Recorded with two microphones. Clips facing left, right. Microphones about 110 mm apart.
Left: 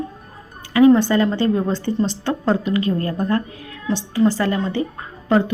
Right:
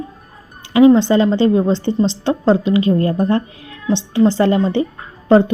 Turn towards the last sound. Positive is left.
turn(degrees=-30)  # may be behind; listen again after turning